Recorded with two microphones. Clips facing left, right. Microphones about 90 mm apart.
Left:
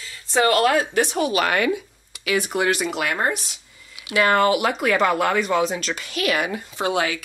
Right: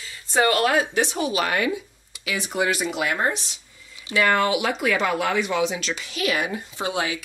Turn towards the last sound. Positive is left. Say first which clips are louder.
# left 4 dB
turn(degrees=65)  # may be behind; listen again after turning